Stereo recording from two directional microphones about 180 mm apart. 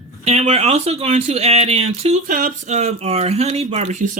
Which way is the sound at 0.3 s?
35° right (ahead or behind).